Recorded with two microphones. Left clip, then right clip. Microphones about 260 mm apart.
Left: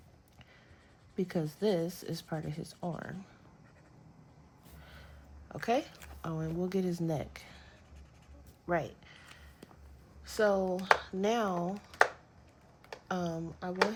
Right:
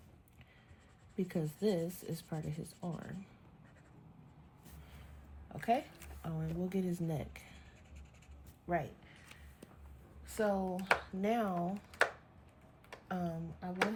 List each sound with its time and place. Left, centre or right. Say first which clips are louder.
1.1 s speech: left 4 dB; left
5.5 s speech: left 3 dB; left
8.6 s speech: left 4 dB; left
10.2 s speech: left 6 dB; left
11.9 s a sound: left 6 dB; left
13.1 s speech: left 5 dB; centre